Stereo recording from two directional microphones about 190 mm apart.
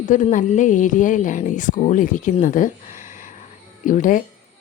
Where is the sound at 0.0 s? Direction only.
40° left (ahead or behind).